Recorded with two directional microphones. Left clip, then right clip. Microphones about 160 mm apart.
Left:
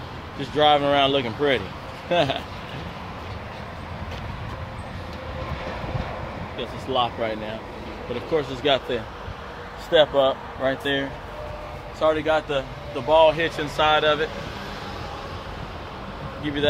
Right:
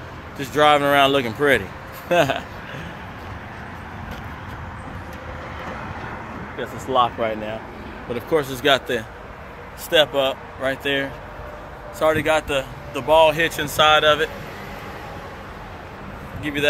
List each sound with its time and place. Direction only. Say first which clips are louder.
0.4 s speech: right 3 dB; 30° right (ahead or behind)
6.6 s speech: right 5 dB; 35° right (ahead or behind)
9.8 s speech: even; centre (ahead or behind)
12.0 s speech: right 2 dB; 45° right (ahead or behind); by 14.3 s 20° right (ahead or behind)